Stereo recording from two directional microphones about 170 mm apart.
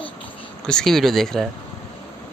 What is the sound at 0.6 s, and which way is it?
Speech, 5° left (ahead or behind).